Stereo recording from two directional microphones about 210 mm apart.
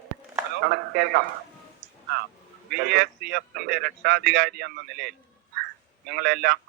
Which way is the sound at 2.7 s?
50° right (ahead or behind).